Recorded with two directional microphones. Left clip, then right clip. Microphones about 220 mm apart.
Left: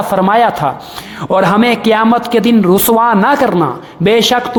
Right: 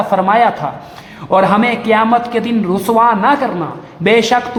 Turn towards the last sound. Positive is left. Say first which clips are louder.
# left 1 dB
turn(degrees=40)  # may be behind; listen again after turning